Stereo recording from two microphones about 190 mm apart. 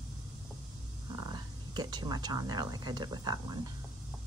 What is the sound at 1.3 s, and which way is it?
Speech, 20° right (ahead or behind).